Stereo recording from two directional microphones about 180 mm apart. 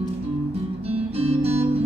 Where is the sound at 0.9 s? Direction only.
35° right (ahead or behind).